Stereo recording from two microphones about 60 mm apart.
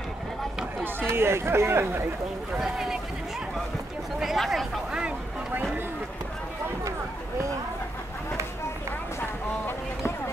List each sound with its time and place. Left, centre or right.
1.0 s speech: right
2.6 s speech: centre
4.2 s speech: centre
5.5 s a sound: right
9.7 s boat: left